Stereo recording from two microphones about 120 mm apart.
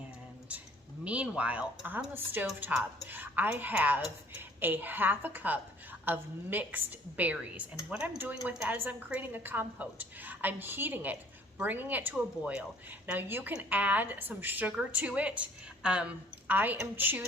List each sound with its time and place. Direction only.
1.0 s a woman's voice: 10° right (ahead or behind)